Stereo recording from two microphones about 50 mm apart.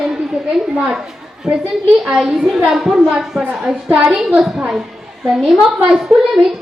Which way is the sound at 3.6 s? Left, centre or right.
Centre.